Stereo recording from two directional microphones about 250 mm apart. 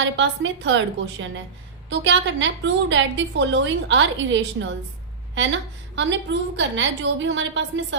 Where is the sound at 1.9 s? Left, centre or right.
Right.